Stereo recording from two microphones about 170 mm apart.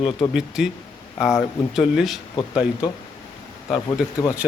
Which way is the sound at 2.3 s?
25° left (ahead or behind).